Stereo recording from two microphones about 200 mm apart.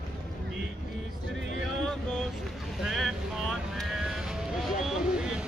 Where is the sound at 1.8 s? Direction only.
Centre (ahead or behind).